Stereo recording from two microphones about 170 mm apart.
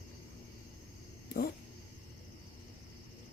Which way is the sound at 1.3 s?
60° left (ahead or behind).